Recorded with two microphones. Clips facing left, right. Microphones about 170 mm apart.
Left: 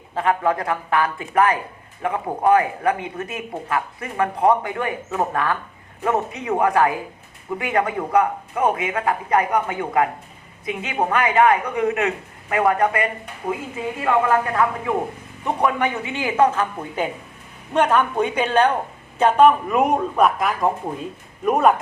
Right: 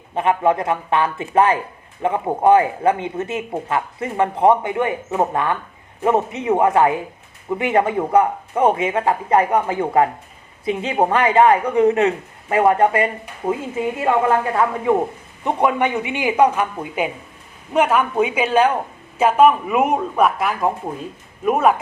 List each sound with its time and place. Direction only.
0.1 s a man's voice: 20° right (ahead or behind); by 21.8 s centre (ahead or behind)